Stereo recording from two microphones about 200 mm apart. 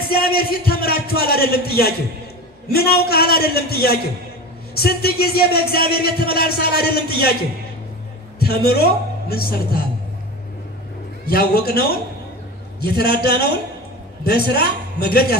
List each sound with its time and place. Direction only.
0.1 s speech: 50° left (ahead or behind)
8.4 s a man's voice: 50° left (ahead or behind)
11.2 s speech: 50° left (ahead or behind)